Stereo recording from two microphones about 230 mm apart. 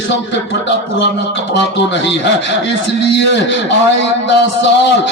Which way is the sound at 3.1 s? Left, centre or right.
Left.